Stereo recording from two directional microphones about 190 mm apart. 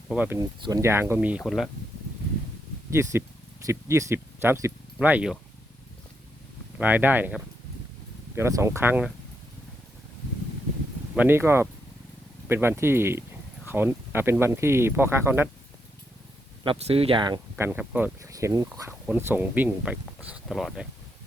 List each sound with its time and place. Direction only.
0.1 s speech: 10° right (ahead or behind)
2.9 s speech: 15° right (ahead or behind)
6.7 s speech: 10° right (ahead or behind)
8.4 s speech: 15° right (ahead or behind)
11.1 s speech: 10° right (ahead or behind)
16.6 s speech: 30° right (ahead or behind)
17.7 s speech: 10° right (ahead or behind)